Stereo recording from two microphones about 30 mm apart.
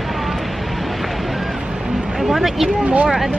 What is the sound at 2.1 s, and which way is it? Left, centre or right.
Speech, centre.